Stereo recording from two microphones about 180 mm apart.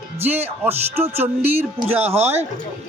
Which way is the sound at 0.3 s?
10° right (ahead or behind).